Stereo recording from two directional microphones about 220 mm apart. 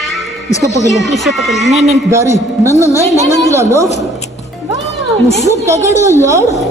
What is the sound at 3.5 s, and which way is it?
Speech, 10° right (ahead or behind).